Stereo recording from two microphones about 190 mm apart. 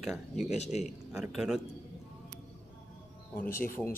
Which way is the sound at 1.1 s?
5° right (ahead or behind).